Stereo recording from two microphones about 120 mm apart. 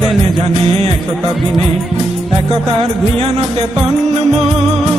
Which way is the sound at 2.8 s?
55° right (ahead or behind).